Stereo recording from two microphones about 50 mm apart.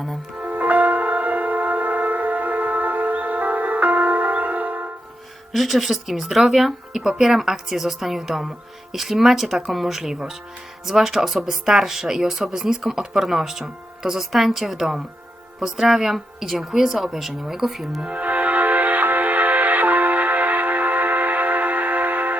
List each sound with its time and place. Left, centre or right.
0.3 s music: right
5.5 s a woman's voice: centre
18.0 s music: right